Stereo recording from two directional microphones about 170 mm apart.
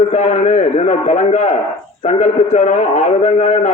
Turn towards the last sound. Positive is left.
turn(degrees=45)  # may be behind; listen again after turning